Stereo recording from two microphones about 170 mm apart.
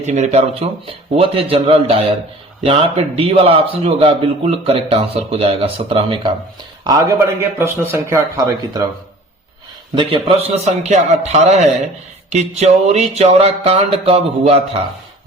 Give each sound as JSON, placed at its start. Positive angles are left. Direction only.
{"t": 0.0, "sound": "a man's voice", "side_deg": -40}
{"t": 6.8, "sound": "a man's voice", "side_deg": -20}
{"t": 9.9, "sound": "a man's voice", "side_deg": -30}